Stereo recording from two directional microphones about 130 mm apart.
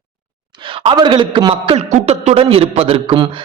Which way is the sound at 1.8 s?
60° right (ahead or behind).